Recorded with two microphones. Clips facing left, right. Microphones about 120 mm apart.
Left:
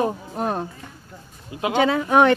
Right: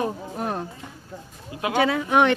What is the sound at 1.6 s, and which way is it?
Speech, 25° left (ahead or behind).